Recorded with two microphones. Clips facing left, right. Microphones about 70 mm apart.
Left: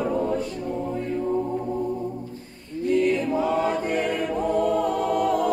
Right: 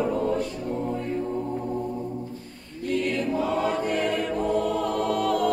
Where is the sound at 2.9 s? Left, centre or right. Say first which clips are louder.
Left 4 dB; centre.